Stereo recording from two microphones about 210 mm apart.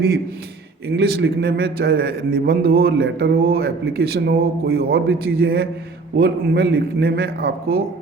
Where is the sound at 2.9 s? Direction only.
65° right (ahead or behind).